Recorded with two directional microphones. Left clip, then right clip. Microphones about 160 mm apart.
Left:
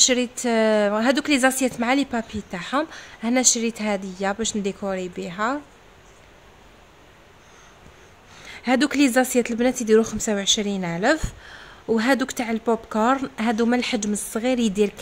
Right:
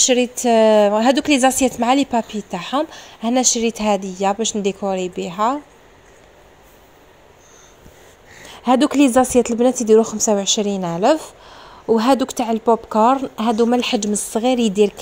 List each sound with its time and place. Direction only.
0.0 s a woman's voice: 15° right (ahead or behind)
8.4 s a sound: 15° right (ahead or behind)
8.7 s a woman's voice: 5° right (ahead or behind)